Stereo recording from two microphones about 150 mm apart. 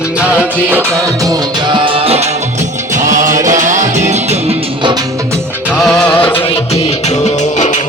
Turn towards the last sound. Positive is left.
turn(degrees=50)  # may be behind; listen again after turning